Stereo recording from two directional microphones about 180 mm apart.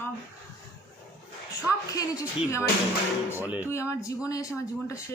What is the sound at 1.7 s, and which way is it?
Speech, 20° left (ahead or behind).